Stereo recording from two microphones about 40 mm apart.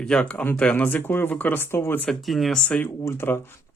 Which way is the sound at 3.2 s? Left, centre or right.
Left.